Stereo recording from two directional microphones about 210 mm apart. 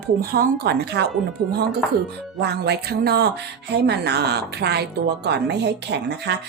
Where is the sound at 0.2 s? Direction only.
45° right (ahead or behind).